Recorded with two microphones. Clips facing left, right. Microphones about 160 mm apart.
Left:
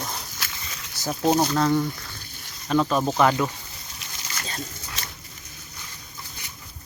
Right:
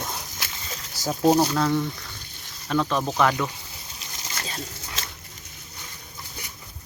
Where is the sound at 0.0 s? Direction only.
15° right (ahead or behind).